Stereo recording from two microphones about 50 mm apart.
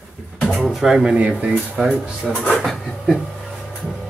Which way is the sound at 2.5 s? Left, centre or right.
Centre.